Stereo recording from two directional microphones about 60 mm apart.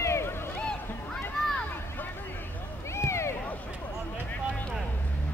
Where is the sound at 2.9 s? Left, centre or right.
Left.